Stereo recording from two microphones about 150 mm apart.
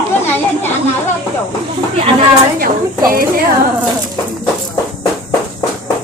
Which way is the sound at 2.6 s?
75° right (ahead or behind).